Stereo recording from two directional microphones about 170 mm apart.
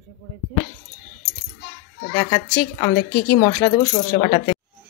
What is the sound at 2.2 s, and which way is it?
Speech, 20° left (ahead or behind).